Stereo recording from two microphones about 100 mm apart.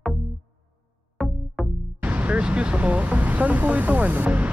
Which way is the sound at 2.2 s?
10° right (ahead or behind).